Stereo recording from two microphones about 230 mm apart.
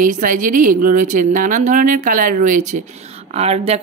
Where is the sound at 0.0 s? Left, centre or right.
Right.